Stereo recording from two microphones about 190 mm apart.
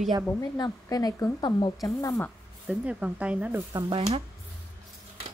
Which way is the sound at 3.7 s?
20° right (ahead or behind).